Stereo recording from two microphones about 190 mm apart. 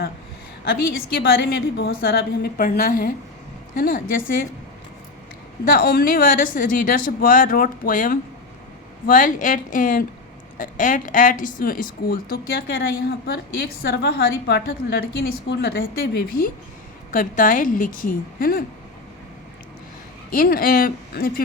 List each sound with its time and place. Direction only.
0.6 s speech: 50° left (ahead or behind)
5.7 s a woman's voice: 50° left (ahead or behind)
20.3 s speech: 50° left (ahead or behind)